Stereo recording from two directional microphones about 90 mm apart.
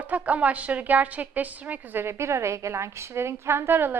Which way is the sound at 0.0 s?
15° right (ahead or behind).